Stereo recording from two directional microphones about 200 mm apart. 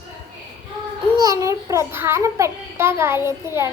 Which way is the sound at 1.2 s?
15° right (ahead or behind).